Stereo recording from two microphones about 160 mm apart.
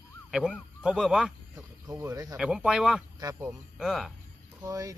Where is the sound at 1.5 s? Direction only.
25° right (ahead or behind).